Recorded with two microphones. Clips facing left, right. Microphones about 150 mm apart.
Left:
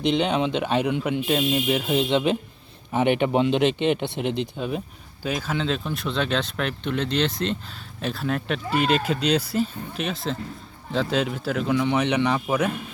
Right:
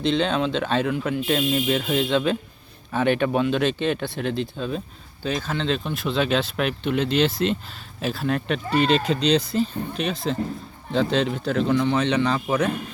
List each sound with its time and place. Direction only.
0.0 s speech: 15° left (ahead or behind)